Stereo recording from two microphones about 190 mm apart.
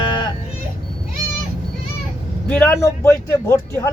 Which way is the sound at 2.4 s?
10° left (ahead or behind).